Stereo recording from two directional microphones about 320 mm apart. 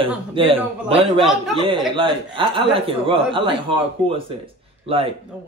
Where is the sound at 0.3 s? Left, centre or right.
Centre.